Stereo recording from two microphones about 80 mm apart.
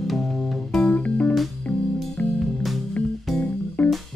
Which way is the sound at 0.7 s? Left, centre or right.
Centre.